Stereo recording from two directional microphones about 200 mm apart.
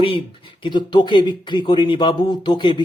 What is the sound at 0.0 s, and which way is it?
Speech, 25° left (ahead or behind).